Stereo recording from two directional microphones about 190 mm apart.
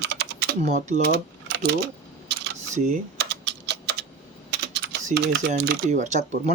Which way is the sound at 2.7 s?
40° right (ahead or behind).